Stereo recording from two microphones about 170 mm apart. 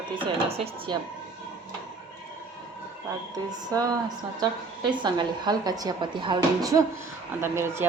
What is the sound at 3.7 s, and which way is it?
A woman's voice, 20° right (ahead or behind).